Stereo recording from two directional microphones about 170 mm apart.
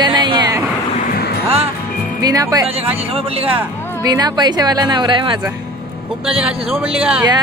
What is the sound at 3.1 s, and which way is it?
Speech, 35° right (ahead or behind).